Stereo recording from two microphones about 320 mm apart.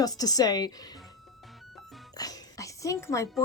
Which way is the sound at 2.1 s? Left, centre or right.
Centre.